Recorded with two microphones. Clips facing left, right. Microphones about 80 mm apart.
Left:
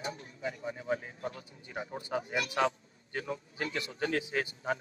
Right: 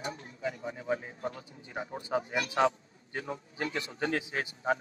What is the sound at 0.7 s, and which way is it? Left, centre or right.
A man's voice, right.